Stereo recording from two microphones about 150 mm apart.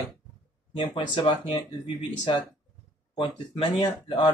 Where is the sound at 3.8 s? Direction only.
30° left (ahead or behind).